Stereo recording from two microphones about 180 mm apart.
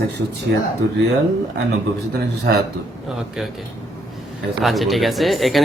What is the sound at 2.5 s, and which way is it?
Speech, 65° right (ahead or behind).